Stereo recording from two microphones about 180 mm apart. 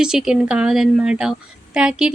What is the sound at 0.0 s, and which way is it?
A woman's voice, 5° right (ahead or behind).